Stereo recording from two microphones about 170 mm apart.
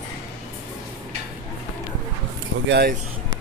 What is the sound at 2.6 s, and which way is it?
Speech, 80° right.